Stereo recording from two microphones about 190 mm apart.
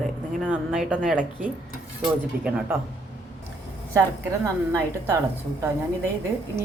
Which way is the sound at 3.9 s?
15° right (ahead or behind).